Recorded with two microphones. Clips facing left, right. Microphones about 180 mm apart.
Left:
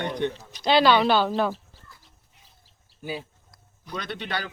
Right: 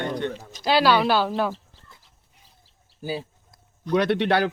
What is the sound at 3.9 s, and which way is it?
Speech, 70° right (ahead or behind).